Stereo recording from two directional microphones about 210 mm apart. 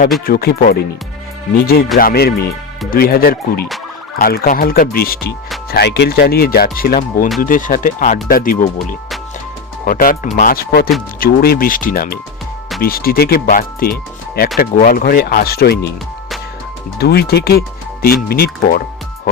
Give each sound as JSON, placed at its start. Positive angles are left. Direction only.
{"t": 0.3, "sound": "speech", "side_deg": 45}
{"t": 2.0, "sound": "speech", "side_deg": 45}
{"t": 17.0, "sound": "speech", "side_deg": 50}